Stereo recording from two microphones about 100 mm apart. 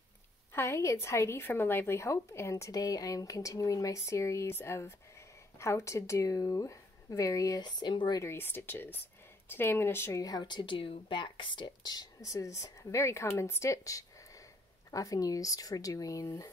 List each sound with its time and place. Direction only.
0.5 s a woman's voice: 25° left (ahead or behind); by 8.2 s 50° left (ahead or behind)
8.2 s a woman's voice: 25° left (ahead or behind)
10.2 s speech: 45° left (ahead or behind)